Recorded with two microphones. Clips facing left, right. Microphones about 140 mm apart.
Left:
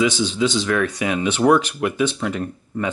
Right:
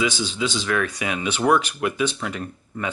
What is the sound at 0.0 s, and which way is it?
Speech, 10° right (ahead or behind).